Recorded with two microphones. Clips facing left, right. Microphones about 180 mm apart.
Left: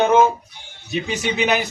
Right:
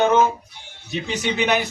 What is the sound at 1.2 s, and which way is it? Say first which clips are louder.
Speech: even; 5° left (ahead or behind).